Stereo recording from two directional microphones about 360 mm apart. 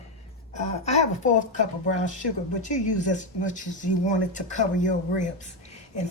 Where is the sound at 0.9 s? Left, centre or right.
Centre.